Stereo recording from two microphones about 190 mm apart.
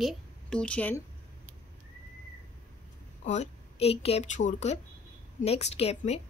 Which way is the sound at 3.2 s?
35° left (ahead or behind).